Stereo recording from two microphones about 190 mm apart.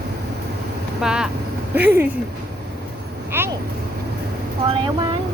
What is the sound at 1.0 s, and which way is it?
Speech, 5° right (ahead or behind).